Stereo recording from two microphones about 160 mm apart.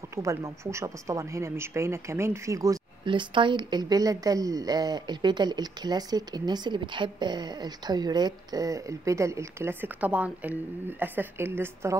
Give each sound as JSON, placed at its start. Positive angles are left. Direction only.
{"t": 0.1, "sound": "speech", "side_deg": -20}
{"t": 3.1, "sound": "speech", "side_deg": -30}